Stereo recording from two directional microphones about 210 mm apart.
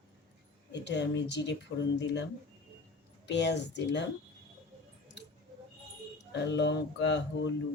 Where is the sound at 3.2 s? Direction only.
55° left (ahead or behind).